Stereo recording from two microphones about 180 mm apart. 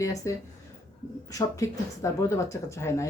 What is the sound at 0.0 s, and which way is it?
Speech, 15° left (ahead or behind).